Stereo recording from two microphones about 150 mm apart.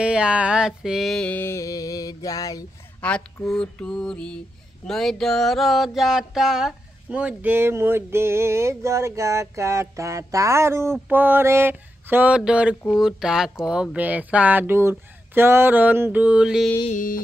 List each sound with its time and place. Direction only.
0.0 s a sound: 5° right (ahead or behind); by 2.6 s 25° left (ahead or behind)
3.0 s mantra: 10° left (ahead or behind)
16.9 s music: 65° left (ahead or behind)